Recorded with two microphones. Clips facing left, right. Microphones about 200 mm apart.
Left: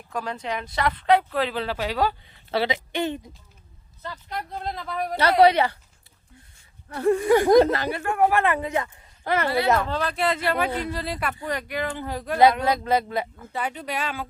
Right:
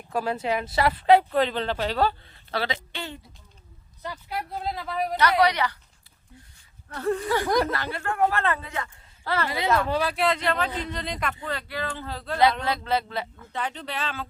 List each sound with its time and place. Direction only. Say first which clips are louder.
0.1 s a woman's voice: right 4 dB; 5° right (ahead or behind); by 3.3 s 20° left (ahead or behind)
4.0 s speech: right 1 dB; 10° right (ahead or behind)
5.1 s a woman's voice: left 5 dB; 30° left (ahead or behind)
6.9 s speech: left 6 dB; 15° left (ahead or behind)
9.8 s speech: right 1 dB; 10° right (ahead or behind); by 14.3 s 10° left (ahead or behind)